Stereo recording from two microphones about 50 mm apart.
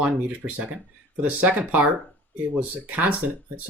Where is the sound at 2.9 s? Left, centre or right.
Right.